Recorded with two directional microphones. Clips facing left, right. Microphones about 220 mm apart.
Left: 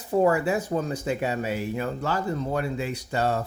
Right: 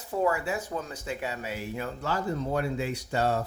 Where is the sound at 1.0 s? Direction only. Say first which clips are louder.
Left 7 dB; 55° left (ahead or behind); by 3.4 s 90° left.